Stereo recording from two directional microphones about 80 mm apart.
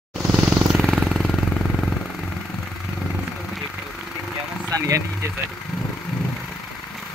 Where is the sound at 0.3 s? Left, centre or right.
Centre.